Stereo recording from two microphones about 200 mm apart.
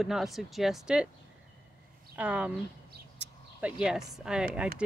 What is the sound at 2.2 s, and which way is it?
Speech, 5° right (ahead or behind).